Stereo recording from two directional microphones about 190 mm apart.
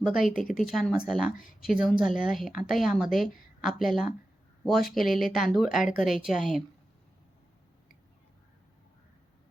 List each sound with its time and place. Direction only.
0.2 s speech: 45° left (ahead or behind)
0.5 s speech: centre (ahead or behind)
4.8 s speech: 50° left (ahead or behind)
5.0 s speech: centre (ahead or behind)